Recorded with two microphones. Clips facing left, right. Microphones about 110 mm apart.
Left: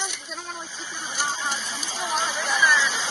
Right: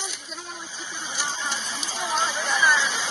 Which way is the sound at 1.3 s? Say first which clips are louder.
Left 2 dB; 30° left (ahead or behind).